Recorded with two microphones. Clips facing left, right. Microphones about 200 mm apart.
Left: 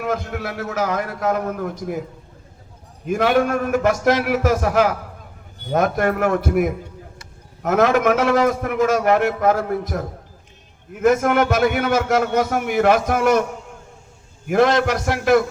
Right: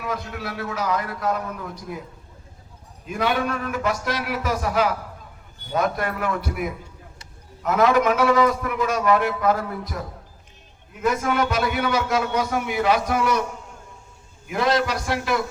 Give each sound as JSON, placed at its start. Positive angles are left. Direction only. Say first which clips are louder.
{"t": 0.0, "sound": "a man's voice", "louder": "left 5 dB", "side_deg": 50}
{"t": 3.1, "sound": "a man's voice", "louder": "left 6 dB", "side_deg": 45}